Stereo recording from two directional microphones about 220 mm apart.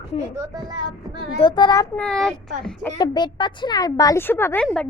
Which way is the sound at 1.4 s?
20° left (ahead or behind).